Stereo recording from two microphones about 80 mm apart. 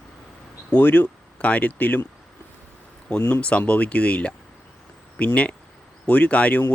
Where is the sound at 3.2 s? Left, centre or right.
Left.